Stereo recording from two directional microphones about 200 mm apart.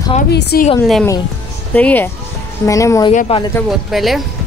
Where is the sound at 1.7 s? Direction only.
10° left (ahead or behind).